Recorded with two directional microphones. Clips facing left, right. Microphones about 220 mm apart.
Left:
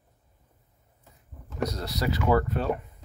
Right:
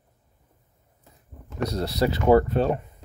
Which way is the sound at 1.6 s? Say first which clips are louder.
Right 5 dB; 30° right (ahead or behind).